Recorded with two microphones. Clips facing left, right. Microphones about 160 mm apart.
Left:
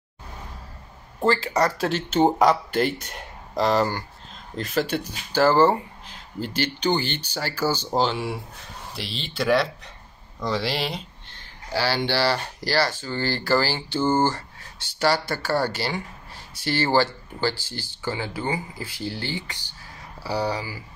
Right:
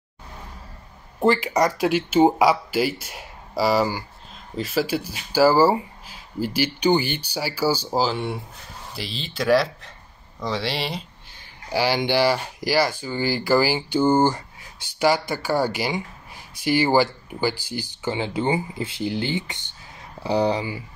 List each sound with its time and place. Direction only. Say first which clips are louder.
1.2 s speech: right 2 dB; 15° right (ahead or behind)